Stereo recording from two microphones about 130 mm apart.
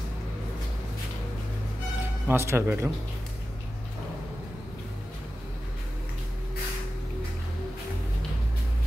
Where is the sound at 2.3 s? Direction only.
20° right (ahead or behind).